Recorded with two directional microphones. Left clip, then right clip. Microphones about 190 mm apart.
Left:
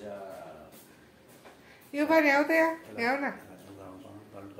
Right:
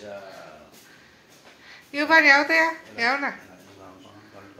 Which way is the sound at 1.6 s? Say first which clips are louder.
Right 4 dB; centre (ahead or behind).